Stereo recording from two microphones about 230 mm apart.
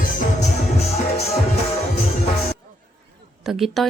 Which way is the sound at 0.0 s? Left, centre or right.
Left.